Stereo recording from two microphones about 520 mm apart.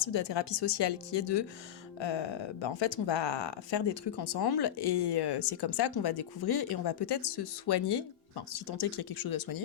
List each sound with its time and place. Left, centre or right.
0.0 s speech: left